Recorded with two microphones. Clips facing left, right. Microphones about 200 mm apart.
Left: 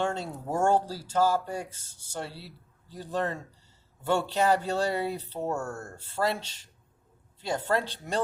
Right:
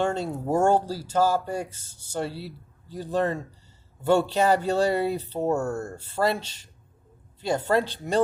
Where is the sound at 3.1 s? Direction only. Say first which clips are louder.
Right 5 dB; 10° right (ahead or behind).